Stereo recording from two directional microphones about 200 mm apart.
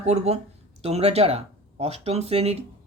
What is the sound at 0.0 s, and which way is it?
Speech, 35° right (ahead or behind).